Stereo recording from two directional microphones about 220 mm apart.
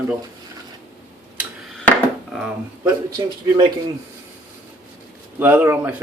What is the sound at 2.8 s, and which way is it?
Speech, 20° right (ahead or behind).